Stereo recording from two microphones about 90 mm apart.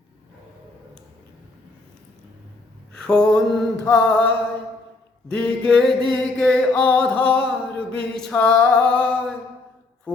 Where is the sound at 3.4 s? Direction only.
10° left (ahead or behind).